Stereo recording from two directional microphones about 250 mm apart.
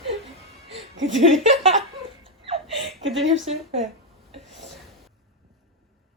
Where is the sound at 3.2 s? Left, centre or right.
Right.